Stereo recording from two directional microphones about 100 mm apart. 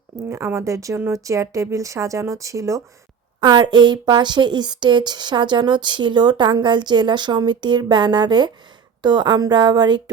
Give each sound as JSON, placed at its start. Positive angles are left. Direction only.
{"t": 0.3, "sound": "speech", "side_deg": -30}
{"t": 3.4, "sound": "speech", "side_deg": -50}